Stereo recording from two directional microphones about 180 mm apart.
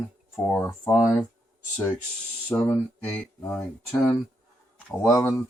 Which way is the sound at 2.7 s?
5° left (ahead or behind).